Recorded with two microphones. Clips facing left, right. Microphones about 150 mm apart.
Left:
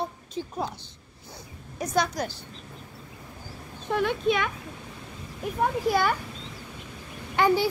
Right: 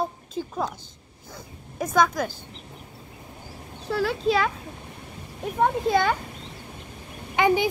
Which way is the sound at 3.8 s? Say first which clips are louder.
Right 1 dB; 35° right (ahead or behind).